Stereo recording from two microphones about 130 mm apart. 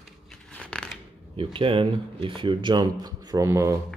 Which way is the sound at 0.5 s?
10° left (ahead or behind).